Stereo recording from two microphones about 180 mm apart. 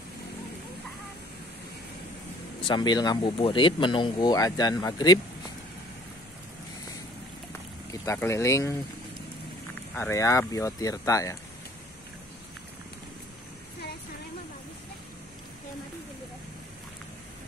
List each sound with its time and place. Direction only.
2.6 s speech: 25° left (ahead or behind)
7.9 s speech: 15° left (ahead or behind)
9.9 s speech: 15° left (ahead or behind)